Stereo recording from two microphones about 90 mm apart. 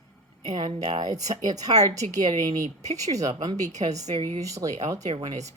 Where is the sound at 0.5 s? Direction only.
55° right (ahead or behind); by 4.9 s 40° right (ahead or behind).